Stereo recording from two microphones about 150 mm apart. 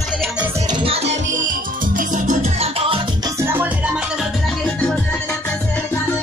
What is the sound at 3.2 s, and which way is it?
Music, 20° right (ahead or behind).